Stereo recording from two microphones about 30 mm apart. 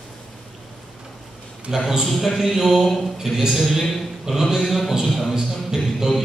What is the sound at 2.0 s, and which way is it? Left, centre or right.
Speech, centre.